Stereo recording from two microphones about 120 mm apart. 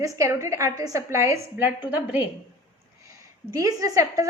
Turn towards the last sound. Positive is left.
turn(degrees=-30)  # may be behind; listen again after turning